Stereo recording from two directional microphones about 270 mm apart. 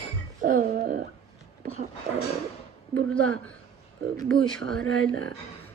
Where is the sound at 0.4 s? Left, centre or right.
Right.